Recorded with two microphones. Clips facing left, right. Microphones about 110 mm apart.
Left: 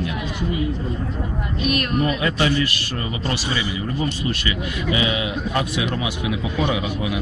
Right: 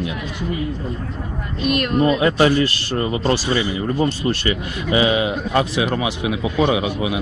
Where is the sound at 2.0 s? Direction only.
30° right (ahead or behind).